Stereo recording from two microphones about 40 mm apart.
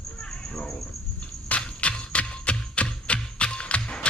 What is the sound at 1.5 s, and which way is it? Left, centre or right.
Music, left.